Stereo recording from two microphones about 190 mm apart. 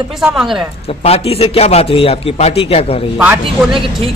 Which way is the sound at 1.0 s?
30° left (ahead or behind).